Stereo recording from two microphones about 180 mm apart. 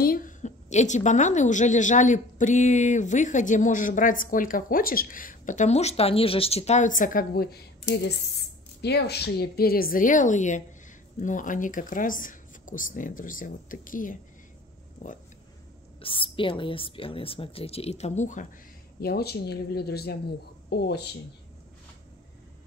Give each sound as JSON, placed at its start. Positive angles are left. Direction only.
{"t": 0.0, "sound": "a woman's voice", "side_deg": 50}
{"t": 16.0, "sound": "a woman's voice", "side_deg": 30}
{"t": 18.9, "sound": "a woman's voice", "side_deg": 60}